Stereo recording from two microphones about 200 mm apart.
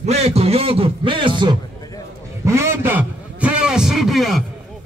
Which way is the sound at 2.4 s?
15° right (ahead or behind).